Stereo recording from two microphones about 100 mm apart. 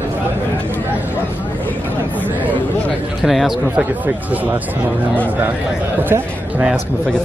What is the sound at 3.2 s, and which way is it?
Speech, 5° right (ahead or behind).